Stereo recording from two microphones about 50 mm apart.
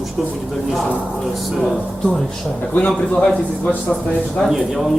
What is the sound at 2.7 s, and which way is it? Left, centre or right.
Speech, left.